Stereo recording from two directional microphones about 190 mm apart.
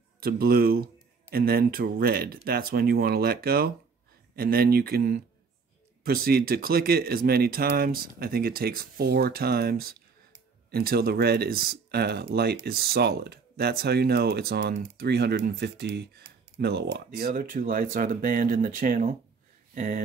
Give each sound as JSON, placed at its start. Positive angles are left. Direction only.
{"t": 0.2, "sound": "speech", "side_deg": -50}